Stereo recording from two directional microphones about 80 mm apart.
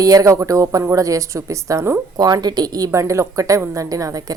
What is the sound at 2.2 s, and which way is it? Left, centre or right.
Speech, right.